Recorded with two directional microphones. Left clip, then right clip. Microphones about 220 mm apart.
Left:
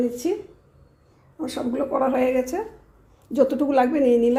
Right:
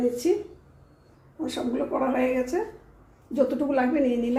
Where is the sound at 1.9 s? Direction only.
50° left (ahead or behind).